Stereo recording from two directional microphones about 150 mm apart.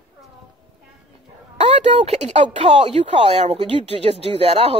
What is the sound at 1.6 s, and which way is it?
Speech, 45° right (ahead or behind).